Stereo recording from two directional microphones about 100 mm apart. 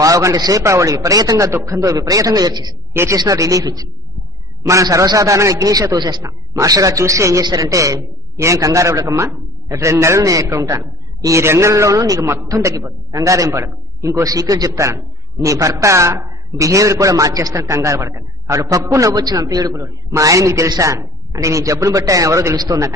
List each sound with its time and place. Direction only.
0.0 s a man's voice: 35° right (ahead or behind)
2.9 s speech: 25° right (ahead or behind)
3.2 s a man's voice: 35° right (ahead or behind)
6.5 s a man's voice: 35° right (ahead or behind)